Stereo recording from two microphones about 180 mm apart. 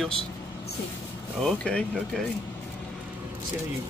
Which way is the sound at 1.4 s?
5° left (ahead or behind).